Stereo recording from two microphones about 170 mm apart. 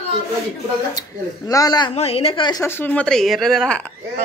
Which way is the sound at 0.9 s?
20° left (ahead or behind).